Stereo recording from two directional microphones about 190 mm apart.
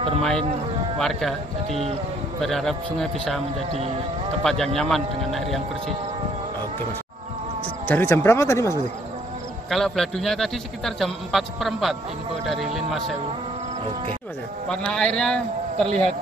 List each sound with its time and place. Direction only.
0.9 s a man's voice: centre (ahead or behind)
1.7 s speech: 35° right (ahead or behind)
2.4 s a man's voice: centre (ahead or behind)
7.9 s speech: 10° left (ahead or behind)
9.7 s a man's voice: centre (ahead or behind)
14.7 s a man's voice: 5° left (ahead or behind)